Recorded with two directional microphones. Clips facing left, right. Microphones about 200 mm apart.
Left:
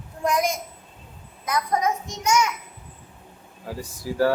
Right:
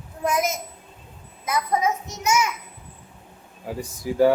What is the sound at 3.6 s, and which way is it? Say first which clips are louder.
Speech: right 2 dB; 20° right (ahead or behind).